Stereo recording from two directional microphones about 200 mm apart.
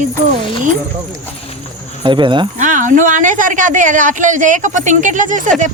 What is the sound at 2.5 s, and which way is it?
Speech, 40° right (ahead or behind).